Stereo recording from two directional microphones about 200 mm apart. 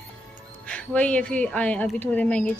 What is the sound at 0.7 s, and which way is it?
A woman's voice, 5° left (ahead or behind).